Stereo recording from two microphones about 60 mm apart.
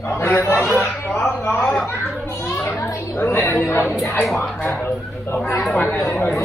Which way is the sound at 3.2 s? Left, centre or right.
Left.